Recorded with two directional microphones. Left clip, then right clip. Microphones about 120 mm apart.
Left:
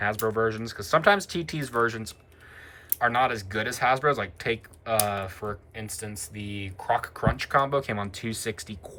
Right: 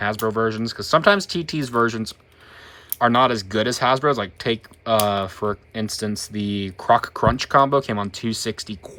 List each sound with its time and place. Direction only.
0.0 s speech: 15° right (ahead or behind)